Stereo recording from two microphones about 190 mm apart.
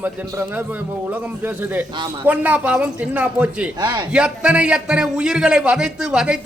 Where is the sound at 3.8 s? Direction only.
20° right (ahead or behind).